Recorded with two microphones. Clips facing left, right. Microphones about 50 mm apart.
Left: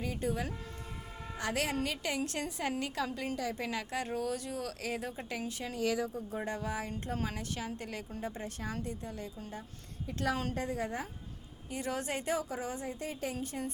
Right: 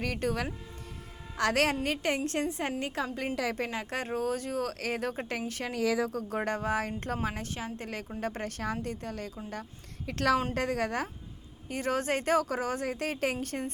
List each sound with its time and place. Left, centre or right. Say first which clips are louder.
0.0 s speech: right 4 dB; right
1.8 s a woman's voice: right 5 dB; right
5.7 s a woman's voice: right 4 dB; right
8.2 s speech: right 7 dB; right
10.1 s a woman's voice: right 7 dB; right
11.7 s speech: right 6 dB; right
12.8 s a woman's voice: right 7 dB; right